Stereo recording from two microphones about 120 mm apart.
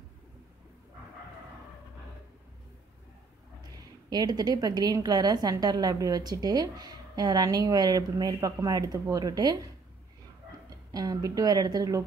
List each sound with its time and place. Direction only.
4.1 s a woman's voice: 35° right (ahead or behind)
10.9 s a woman's voice: 30° right (ahead or behind)